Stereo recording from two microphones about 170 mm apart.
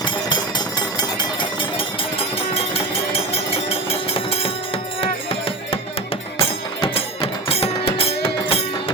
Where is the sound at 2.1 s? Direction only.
35° left (ahead or behind).